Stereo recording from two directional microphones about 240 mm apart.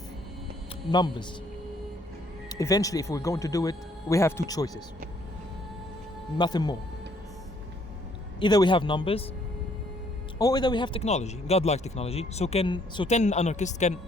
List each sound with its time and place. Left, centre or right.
0.9 s speech: centre
2.5 s speech: centre
6.3 s speech: centre
8.4 s speech: centre
10.3 s speech: centre